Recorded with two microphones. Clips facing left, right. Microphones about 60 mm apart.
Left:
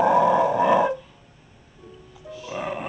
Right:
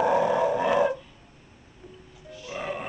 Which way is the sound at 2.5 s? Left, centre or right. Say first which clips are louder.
Left 3 dB; centre.